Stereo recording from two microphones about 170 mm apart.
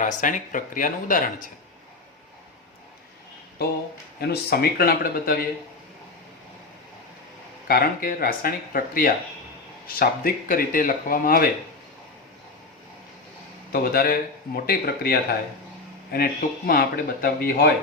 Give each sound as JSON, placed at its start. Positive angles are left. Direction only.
{"t": 0.0, "sound": "speech", "side_deg": 50}
{"t": 3.6, "sound": "speech", "side_deg": 70}
{"t": 7.7, "sound": "speech", "side_deg": 60}
{"t": 13.7, "sound": "speech", "side_deg": 60}